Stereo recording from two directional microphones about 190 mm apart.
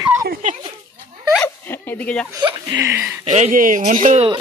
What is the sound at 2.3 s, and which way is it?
Speech, 20° right (ahead or behind).